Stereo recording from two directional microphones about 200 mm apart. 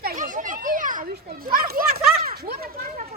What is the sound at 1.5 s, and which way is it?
Speech, 45° right (ahead or behind).